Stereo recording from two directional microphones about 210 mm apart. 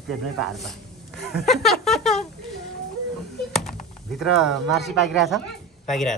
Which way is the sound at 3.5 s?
Centre (ahead or behind).